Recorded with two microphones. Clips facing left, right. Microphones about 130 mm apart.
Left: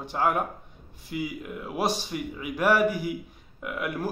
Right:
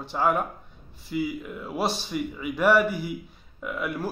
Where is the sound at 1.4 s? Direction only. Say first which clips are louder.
Even; 10° left (ahead or behind).